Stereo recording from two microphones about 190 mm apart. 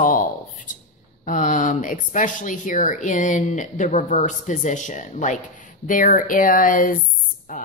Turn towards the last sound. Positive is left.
turn(degrees=45)  # may be behind; listen again after turning